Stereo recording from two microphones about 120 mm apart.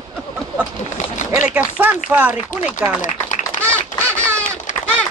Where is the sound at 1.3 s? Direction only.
10° right (ahead or behind).